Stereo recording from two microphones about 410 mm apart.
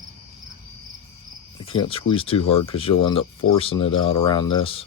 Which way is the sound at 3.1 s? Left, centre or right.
Left.